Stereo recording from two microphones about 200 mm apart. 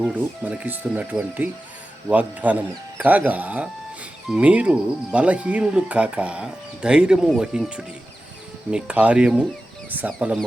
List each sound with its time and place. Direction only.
0.0 s speech: 5° right (ahead or behind)